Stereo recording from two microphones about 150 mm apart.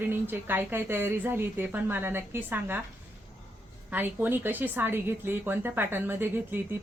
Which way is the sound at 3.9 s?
10° right (ahead or behind).